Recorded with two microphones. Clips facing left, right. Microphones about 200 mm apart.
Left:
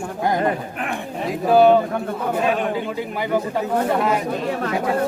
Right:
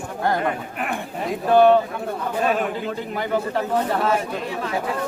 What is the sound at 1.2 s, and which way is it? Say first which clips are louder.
Speech: left 1 dB; 5° left (ahead or behind).